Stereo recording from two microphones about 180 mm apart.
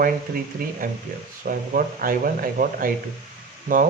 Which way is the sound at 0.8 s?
50° right (ahead or behind).